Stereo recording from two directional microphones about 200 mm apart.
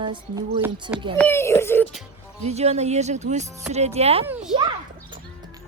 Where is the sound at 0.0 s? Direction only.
25° right (ahead or behind).